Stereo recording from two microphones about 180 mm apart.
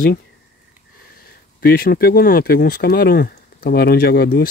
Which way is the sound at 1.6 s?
55° left (ahead or behind).